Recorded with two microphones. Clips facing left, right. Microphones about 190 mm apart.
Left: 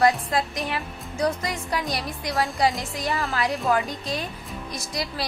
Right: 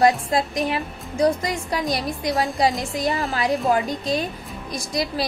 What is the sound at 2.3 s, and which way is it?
Speech, 15° right (ahead or behind).